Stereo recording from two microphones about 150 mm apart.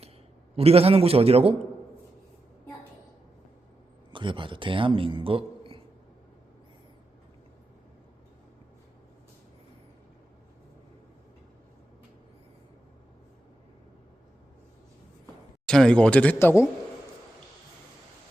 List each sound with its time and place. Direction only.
0.5 s a man's voice: 40° right (ahead or behind)
4.1 s a man's voice: 35° right (ahead or behind)
15.6 s speech: 5° left (ahead or behind)